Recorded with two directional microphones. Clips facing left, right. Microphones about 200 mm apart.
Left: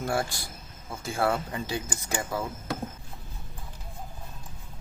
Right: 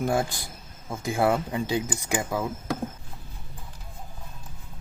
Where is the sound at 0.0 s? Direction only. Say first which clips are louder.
Right 4 dB; 15° right (ahead or behind).